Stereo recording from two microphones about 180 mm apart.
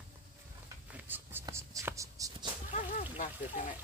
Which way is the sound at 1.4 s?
15° right (ahead or behind).